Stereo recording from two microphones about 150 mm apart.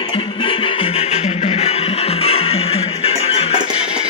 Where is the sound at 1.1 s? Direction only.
45° left (ahead or behind).